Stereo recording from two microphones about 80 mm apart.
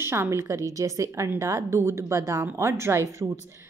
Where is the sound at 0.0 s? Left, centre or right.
Right.